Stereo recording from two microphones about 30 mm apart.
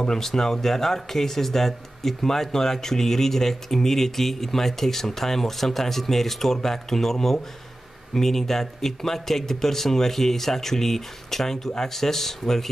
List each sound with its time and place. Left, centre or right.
0.2 s speech: centre